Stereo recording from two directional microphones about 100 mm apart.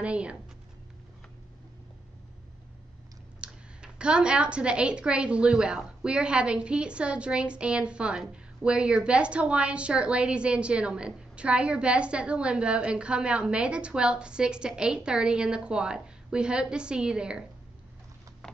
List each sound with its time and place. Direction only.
0.0 s speech: 10° right (ahead or behind)
3.3 s speech: 10° right (ahead or behind)